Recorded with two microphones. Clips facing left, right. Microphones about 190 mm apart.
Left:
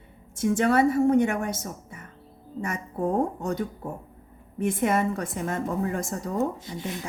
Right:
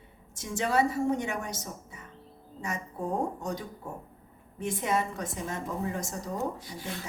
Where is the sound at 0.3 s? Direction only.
55° left (ahead or behind).